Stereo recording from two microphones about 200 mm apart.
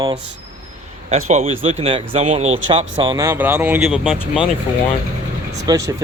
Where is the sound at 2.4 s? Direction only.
80° right.